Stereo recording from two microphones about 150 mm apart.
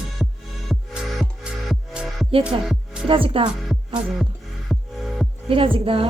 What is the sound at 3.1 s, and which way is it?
Speech, 35° right (ahead or behind).